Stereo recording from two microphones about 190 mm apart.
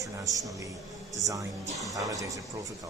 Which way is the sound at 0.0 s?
20° right (ahead or behind).